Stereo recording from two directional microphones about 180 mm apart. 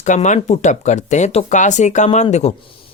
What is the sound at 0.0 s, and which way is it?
Speech, 45° left (ahead or behind).